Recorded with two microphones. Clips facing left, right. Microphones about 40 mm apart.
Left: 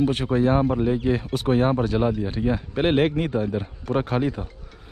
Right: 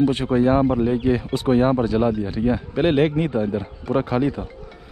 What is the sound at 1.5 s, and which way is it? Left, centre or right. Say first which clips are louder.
Speech: right 3 dB; right.